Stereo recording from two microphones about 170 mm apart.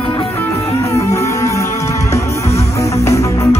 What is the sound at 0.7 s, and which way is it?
Music, 20° left (ahead or behind).